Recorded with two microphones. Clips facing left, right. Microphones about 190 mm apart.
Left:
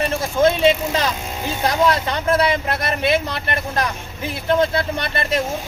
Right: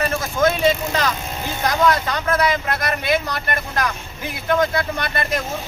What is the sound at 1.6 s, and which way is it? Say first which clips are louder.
A man's voice: even; 30° left (ahead or behind).